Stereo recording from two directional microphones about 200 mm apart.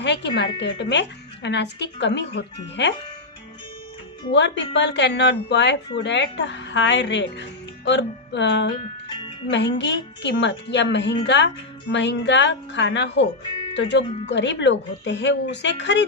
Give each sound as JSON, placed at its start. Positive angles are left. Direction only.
{"t": 0.0, "sound": "speech", "side_deg": 60}
{"t": 4.3, "sound": "speech", "side_deg": 65}
{"t": 9.0, "sound": "music", "side_deg": 25}
{"t": 9.5, "sound": "speech", "side_deg": 65}